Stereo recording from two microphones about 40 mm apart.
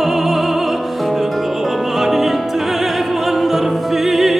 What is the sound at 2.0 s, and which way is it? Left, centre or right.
Music, centre.